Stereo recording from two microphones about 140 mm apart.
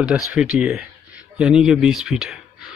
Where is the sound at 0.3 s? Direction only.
5° right (ahead or behind).